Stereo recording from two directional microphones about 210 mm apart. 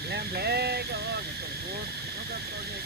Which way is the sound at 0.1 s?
50° right (ahead or behind).